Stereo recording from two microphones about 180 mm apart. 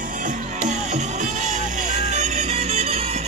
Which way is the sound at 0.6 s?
40° right (ahead or behind).